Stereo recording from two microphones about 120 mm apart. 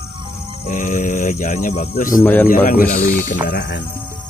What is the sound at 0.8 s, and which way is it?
Speech, 75° left (ahead or behind).